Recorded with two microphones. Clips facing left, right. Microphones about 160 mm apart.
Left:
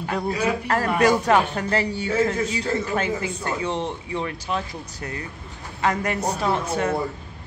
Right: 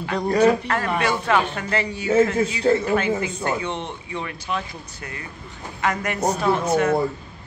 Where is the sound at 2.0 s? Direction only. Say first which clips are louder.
Right 7 dB; 25° right (ahead or behind).